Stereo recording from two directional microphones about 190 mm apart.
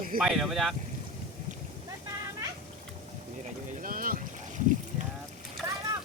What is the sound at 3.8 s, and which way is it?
Boat, 50° right (ahead or behind).